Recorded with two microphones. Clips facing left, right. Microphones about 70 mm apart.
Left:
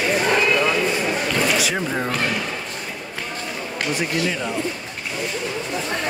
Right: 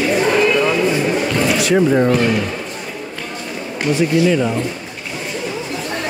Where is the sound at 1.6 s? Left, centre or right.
Centre.